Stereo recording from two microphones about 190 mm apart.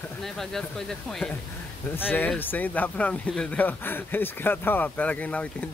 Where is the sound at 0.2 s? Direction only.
Centre (ahead or behind).